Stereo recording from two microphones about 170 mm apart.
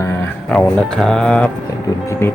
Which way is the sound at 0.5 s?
5° left (ahead or behind).